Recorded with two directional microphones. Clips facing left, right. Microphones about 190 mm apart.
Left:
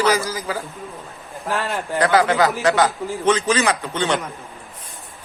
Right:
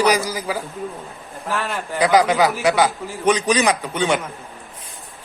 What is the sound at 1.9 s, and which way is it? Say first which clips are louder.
A man's voice: right 1 dB; 10° right (ahead or behind).